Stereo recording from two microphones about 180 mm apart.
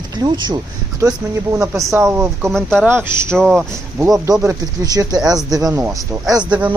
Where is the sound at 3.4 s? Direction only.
Centre (ahead or behind).